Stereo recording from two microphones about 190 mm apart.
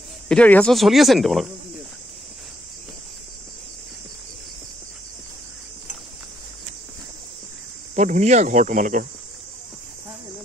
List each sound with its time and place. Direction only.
0.3 s speech: 5° left (ahead or behind)
7.9 s speech: 35° right (ahead or behind)